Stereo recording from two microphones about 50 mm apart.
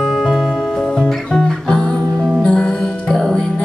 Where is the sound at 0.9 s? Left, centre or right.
Centre.